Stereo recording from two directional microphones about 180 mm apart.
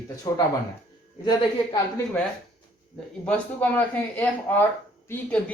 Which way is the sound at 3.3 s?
10° left (ahead or behind).